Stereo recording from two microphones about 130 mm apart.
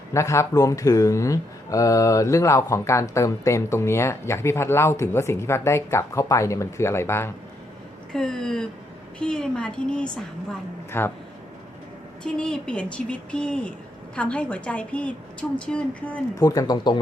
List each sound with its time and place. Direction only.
0.1 s speech: 20° left (ahead or behind)
8.1 s a woman's voice: 5° left (ahead or behind)
10.9 s a woman's voice: 15° left (ahead or behind)
12.2 s a woman's voice: 5° left (ahead or behind)
16.4 s speech: 30° left (ahead or behind)